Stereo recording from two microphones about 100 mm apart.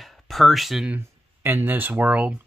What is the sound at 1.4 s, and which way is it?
Speech, 20° right (ahead or behind).